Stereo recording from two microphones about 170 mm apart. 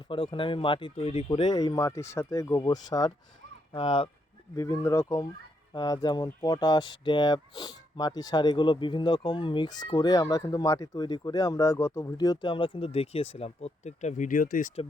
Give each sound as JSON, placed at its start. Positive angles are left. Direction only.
{"t": 0.1, "sound": "speech", "side_deg": 30}
{"t": 4.5, "sound": "speech", "side_deg": 20}